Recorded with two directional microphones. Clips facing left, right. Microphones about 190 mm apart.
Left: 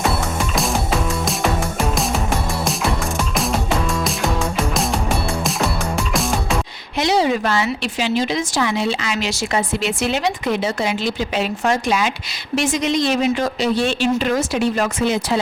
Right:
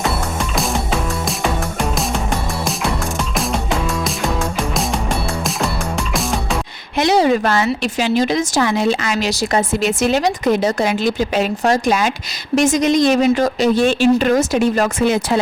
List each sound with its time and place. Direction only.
0.5 s music: centre (ahead or behind)
7.0 s a woman's voice: 50° right (ahead or behind)